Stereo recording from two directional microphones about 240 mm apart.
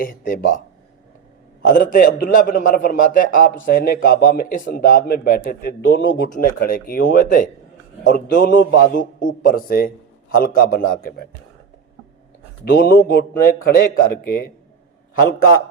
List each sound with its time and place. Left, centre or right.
0.0 s a man's voice: left
1.6 s a man's voice: left
6.3 s a man's voice: left
12.6 s a man's voice: left